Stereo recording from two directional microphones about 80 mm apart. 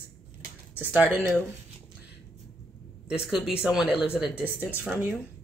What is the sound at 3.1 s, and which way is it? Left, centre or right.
Speech, centre.